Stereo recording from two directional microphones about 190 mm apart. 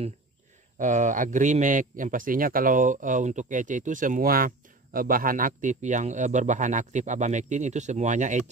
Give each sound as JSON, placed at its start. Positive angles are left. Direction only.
{"t": 0.7, "sound": "a man's voice", "side_deg": -40}